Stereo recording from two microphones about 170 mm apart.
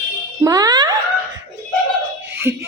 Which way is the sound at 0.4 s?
20° right (ahead or behind).